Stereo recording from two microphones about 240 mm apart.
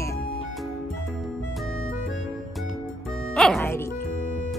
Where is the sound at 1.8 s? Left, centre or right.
Left.